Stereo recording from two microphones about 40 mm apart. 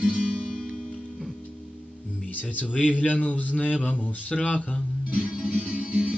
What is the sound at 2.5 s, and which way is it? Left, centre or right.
Music, left.